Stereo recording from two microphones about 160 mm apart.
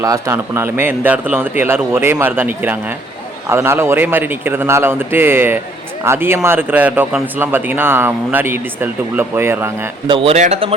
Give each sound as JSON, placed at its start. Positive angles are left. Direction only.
{"t": 0.0, "sound": "a man's voice", "side_deg": -20}
{"t": 10.1, "sound": "speech", "side_deg": -35}